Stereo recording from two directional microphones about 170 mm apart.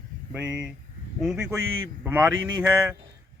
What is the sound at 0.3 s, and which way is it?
Speech, 5° right (ahead or behind).